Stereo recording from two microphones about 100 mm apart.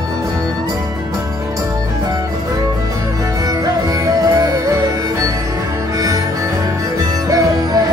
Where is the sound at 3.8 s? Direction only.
35° right (ahead or behind).